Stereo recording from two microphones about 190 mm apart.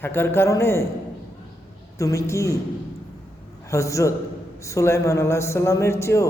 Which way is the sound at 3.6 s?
15° left (ahead or behind).